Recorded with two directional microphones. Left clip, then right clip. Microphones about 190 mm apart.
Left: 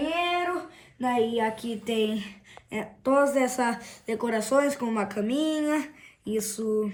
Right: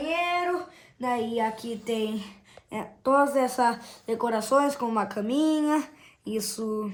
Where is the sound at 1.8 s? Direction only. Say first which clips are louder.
Left 3 dB; 20° right (ahead or behind).